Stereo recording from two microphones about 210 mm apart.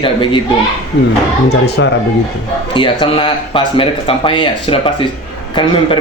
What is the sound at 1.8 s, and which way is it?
Speech, 65° left (ahead or behind).